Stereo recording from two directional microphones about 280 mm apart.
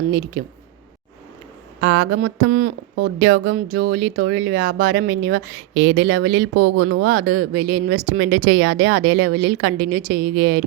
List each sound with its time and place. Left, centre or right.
0.1 s speech: right
1.8 s speech: right